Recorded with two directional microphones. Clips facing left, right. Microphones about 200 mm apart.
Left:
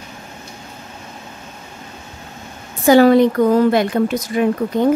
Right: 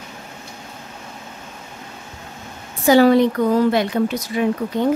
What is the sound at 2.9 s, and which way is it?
A woman's voice, 50° left (ahead or behind).